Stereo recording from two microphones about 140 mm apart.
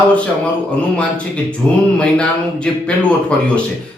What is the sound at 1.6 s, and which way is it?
Speech, 5° left (ahead or behind).